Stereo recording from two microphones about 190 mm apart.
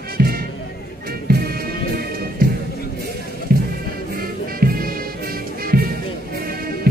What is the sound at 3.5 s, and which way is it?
Music, 55° right (ahead or behind).